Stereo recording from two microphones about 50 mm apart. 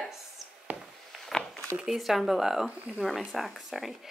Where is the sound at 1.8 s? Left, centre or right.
Centre.